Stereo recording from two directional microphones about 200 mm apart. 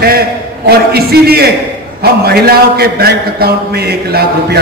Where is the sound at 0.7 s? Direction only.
50° right (ahead or behind).